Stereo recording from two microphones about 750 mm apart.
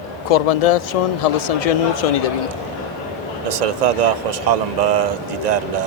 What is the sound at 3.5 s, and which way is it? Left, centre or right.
Speech, right.